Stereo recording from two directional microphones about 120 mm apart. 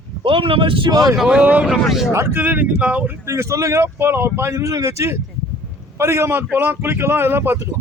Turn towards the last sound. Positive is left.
turn(degrees=-20)  # may be behind; listen again after turning